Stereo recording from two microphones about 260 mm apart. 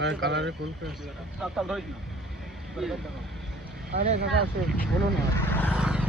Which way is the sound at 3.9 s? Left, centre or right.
Right.